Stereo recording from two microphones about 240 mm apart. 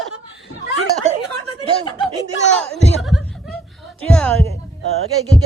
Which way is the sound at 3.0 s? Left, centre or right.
Centre.